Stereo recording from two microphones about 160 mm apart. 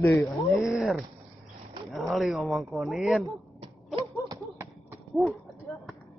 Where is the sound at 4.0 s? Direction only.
20° right (ahead or behind).